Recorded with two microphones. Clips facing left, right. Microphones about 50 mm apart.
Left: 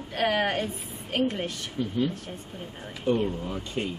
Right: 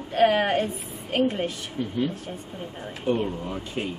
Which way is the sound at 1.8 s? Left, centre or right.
Right.